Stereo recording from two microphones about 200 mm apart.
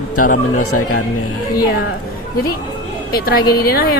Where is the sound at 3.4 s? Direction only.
20° left (ahead or behind).